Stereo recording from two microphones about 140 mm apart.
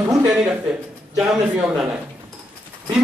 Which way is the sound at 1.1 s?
5° right (ahead or behind).